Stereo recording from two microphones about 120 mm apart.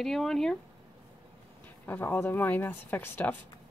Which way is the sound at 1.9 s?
20° left (ahead or behind).